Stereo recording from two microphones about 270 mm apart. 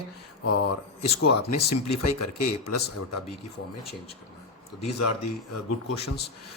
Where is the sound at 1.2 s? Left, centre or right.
Left.